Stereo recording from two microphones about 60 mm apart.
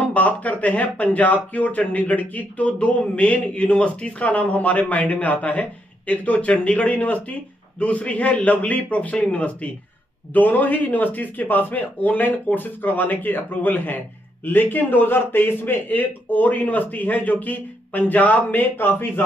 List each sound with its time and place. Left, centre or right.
0.0 s speech: left